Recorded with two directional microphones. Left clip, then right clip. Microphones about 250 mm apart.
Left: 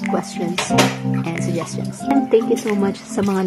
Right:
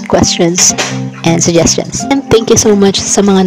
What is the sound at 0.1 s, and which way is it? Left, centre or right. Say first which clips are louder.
Speech: right 16 dB; right.